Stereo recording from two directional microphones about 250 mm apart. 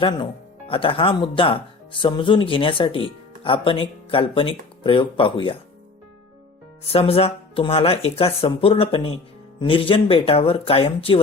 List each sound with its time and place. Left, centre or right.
0.7 s speech: left
6.9 s speech: left